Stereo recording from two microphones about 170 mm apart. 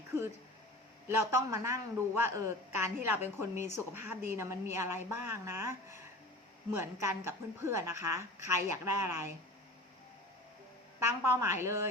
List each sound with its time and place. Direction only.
1.0 s speech: 15° right (ahead or behind)
11.0 s speech: 15° right (ahead or behind)